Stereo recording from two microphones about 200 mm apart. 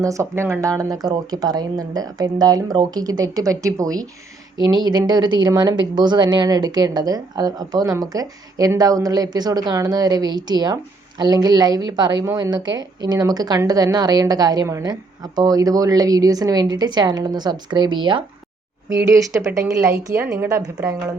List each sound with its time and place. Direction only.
0.0 s a woman's voice: 15° right (ahead or behind)